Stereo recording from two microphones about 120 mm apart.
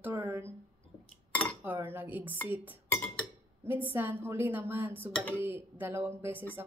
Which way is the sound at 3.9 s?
20° right (ahead or behind).